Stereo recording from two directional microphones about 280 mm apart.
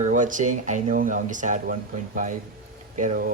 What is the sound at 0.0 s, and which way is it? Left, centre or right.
Speech, right.